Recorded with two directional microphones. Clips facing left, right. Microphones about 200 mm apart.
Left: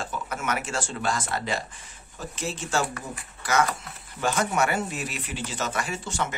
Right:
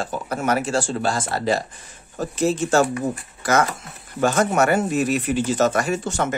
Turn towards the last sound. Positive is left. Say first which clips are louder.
# right 8 dB
turn(degrees=-45)  # may be behind; listen again after turning